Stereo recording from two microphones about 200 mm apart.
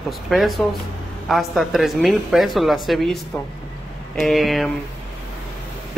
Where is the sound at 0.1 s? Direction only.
Centre (ahead or behind).